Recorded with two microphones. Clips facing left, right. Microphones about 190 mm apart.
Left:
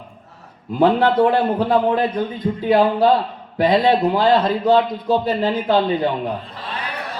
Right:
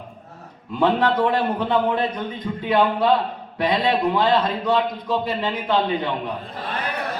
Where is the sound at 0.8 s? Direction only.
35° left (ahead or behind).